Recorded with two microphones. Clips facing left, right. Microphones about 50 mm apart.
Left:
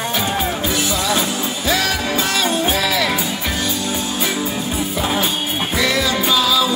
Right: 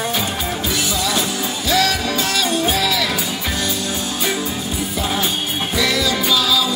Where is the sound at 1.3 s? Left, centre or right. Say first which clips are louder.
Even; left.